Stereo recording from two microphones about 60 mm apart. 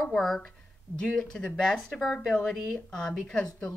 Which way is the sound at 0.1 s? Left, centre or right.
Centre.